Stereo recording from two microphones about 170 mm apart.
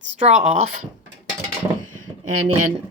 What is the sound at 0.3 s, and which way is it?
Speech, 40° right (ahead or behind).